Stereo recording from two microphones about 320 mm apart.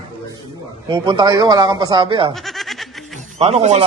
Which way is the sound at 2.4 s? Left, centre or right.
Centre.